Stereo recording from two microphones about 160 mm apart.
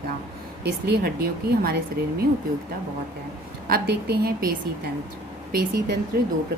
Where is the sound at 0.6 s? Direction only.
90° right; by 1.7 s 70° right (ahead or behind).